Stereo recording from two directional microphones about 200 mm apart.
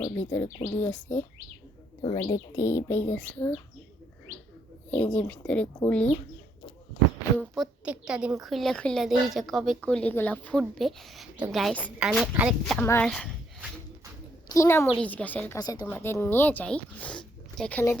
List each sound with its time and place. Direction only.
0.1 s speech: 10° left (ahead or behind)
2.0 s speech: 25° left (ahead or behind); by 3.5 s 10° left (ahead or behind)
4.9 s speech: 5° left (ahead or behind)
7.3 s a woman's voice: centre (ahead or behind)
12.8 s speech: 10° left (ahead or behind)
14.5 s speech: 15° left (ahead or behind)
15.5 s speech: 20° left (ahead or behind)